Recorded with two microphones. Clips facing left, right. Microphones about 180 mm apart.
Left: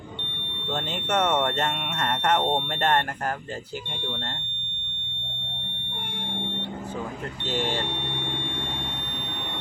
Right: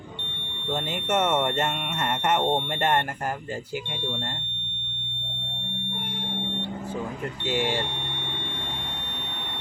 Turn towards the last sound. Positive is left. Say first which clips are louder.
# right 1 dB
turn(degrees=-15)  # may be behind; listen again after turning